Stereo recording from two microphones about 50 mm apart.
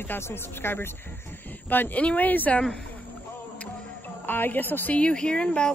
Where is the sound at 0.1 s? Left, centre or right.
Left.